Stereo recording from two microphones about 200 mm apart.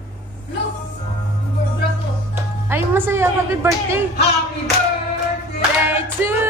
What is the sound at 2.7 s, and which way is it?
A woman's voice, 10° right (ahead or behind).